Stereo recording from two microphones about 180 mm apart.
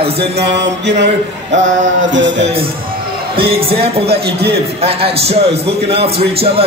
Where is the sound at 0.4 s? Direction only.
70° right (ahead or behind).